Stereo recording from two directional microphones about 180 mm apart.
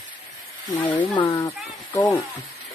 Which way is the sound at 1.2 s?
20° left (ahead or behind).